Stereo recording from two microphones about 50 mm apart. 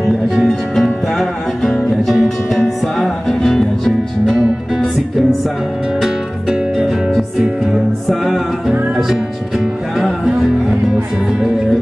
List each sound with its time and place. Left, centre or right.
0.5 s music: centre
7.2 s music: centre
9.9 s music: centre